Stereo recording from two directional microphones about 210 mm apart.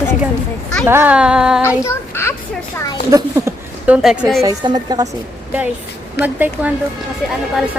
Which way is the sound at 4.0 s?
Centre (ahead or behind).